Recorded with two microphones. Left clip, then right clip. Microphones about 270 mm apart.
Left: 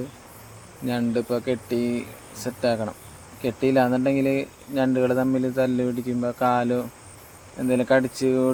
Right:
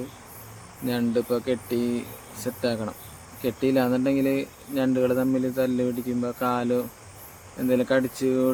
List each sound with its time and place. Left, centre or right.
0.9 s speech: centre